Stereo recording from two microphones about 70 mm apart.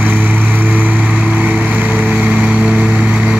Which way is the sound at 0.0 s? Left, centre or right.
Right.